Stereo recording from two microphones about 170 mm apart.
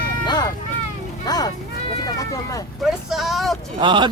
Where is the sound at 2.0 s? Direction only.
20° left (ahead or behind).